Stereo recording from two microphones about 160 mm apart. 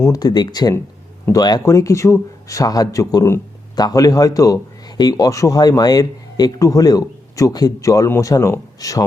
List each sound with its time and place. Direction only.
0.0 s speech: 25° left (ahead or behind)